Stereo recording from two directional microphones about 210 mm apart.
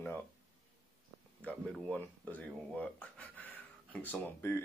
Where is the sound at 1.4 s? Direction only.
5° left (ahead or behind).